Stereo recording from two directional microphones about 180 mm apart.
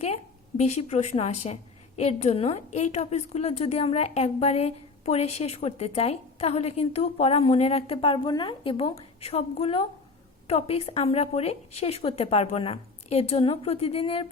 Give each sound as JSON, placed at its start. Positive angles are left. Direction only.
{"t": 0.0, "sound": "a woman's voice", "side_deg": 35}